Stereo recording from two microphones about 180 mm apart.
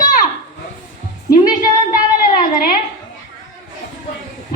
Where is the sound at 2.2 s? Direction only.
50° left (ahead or behind).